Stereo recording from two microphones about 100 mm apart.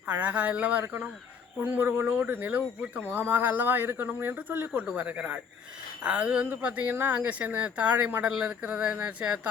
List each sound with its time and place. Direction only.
0.1 s speech: 15° right (ahead or behind)